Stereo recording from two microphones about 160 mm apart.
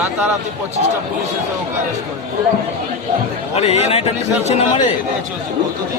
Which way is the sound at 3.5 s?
40° left (ahead or behind).